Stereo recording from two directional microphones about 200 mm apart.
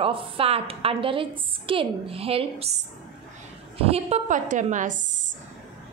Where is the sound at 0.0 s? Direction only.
25° right (ahead or behind).